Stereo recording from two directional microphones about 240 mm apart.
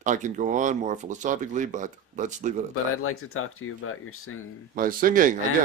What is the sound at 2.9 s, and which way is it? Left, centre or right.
Speech, left.